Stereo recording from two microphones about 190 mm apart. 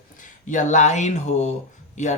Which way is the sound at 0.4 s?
40° left (ahead or behind).